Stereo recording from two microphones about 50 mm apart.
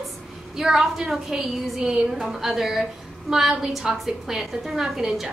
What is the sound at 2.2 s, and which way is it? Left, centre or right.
A woman's voice, centre.